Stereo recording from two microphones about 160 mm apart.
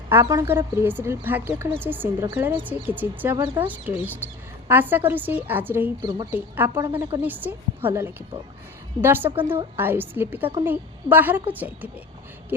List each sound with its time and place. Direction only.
0.1 s speech: 15° right (ahead or behind)
6.0 s speech: 25° right (ahead or behind)
6.3 s speech: 15° right (ahead or behind)